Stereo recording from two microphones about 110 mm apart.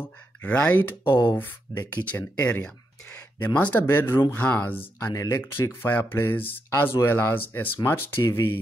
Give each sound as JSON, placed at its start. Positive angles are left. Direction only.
{"t": 0.0, "sound": "speech", "side_deg": 15}
{"t": 5.1, "sound": "speech", "side_deg": 30}
{"t": 5.8, "sound": "speech", "side_deg": 20}